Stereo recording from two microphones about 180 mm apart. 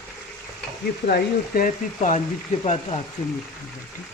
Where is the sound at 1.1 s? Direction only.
55° left (ahead or behind).